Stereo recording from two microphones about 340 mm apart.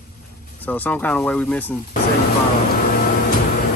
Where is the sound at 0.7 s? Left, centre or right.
Centre.